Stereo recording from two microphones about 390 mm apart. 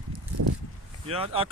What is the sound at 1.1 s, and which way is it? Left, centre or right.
Speech, centre.